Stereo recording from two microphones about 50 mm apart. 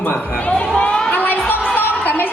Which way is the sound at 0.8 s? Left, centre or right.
Left.